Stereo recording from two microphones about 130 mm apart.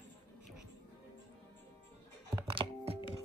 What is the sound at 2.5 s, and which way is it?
Music, 40° right (ahead or behind).